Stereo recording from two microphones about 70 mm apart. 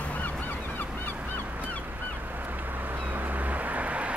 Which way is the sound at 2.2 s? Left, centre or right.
Right.